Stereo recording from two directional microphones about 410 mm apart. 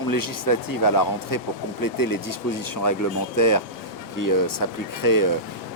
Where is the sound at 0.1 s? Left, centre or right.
Left.